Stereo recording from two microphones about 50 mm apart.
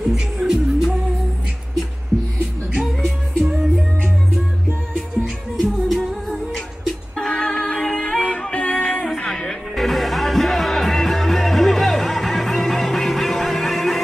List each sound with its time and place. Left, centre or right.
0.1 s music: centre
2.8 s music: centre
5.1 s music: centre
7.2 s music: centre